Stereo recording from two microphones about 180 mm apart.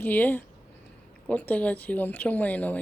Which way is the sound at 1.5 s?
10° left (ahead or behind).